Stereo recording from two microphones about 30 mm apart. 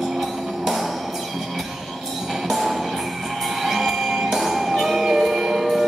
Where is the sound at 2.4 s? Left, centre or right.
Centre.